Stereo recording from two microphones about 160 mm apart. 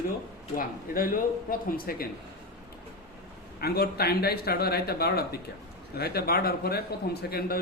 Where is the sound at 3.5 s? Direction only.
75° left (ahead or behind).